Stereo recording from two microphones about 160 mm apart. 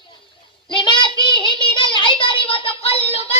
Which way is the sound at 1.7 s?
30° left (ahead or behind).